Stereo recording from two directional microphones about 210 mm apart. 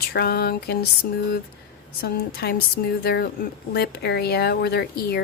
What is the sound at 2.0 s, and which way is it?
A woman's voice, 50° left (ahead or behind).